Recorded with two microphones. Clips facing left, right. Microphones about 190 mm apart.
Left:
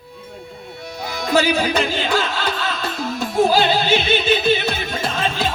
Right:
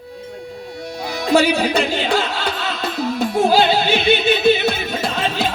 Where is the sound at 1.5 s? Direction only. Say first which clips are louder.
Right 1 dB; 65° right (ahead or behind).